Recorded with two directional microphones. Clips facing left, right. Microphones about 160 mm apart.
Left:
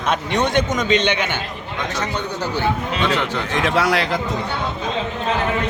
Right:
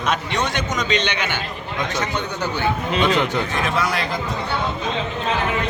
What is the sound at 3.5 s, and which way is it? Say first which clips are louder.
Speech: left 4 dB; 90° left.